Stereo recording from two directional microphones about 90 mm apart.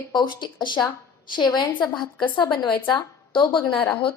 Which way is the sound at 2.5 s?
55° left (ahead or behind).